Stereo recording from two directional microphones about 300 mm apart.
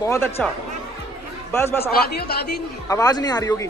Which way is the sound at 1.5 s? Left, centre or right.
Centre.